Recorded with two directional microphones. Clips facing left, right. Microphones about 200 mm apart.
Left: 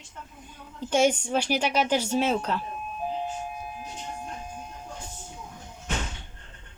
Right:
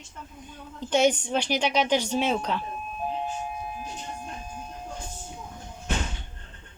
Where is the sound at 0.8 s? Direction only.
10° left (ahead or behind).